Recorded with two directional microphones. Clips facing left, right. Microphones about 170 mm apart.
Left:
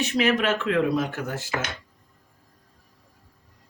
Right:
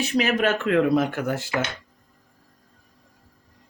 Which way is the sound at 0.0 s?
35° right (ahead or behind).